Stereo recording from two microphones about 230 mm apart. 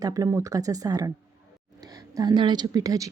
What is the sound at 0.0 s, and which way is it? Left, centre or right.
Speech, centre.